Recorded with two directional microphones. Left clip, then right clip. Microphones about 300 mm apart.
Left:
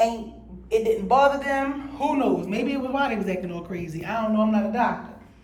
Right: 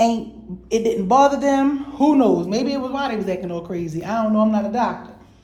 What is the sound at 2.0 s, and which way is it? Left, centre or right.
Speech, right.